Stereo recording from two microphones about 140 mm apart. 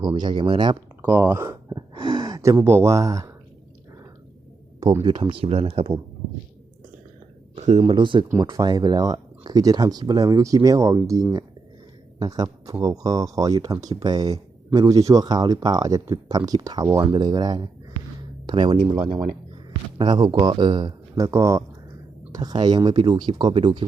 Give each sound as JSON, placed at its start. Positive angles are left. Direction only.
{"t": 0.0, "sound": "speech", "side_deg": -35}
{"t": 1.0, "sound": "speech", "side_deg": -15}
{"t": 1.7, "sound": "speech", "side_deg": -35}
{"t": 5.0, "sound": "speech", "side_deg": -35}
{"t": 7.5, "sound": "a sound", "side_deg": -50}
{"t": 7.9, "sound": "speech", "side_deg": -35}
{"t": 8.3, "sound": "speech", "side_deg": -20}